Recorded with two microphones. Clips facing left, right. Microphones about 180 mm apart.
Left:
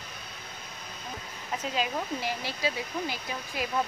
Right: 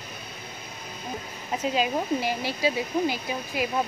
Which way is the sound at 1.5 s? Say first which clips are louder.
Right 5 dB; 20° right (ahead or behind).